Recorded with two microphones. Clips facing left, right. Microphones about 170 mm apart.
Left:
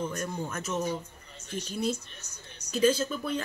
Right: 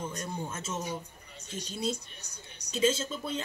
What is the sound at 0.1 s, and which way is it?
Speech, 25° right (ahead or behind).